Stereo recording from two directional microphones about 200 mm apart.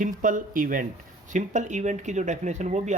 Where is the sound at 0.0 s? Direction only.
40° right (ahead or behind).